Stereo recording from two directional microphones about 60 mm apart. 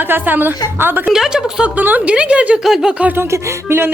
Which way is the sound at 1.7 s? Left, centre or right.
Right.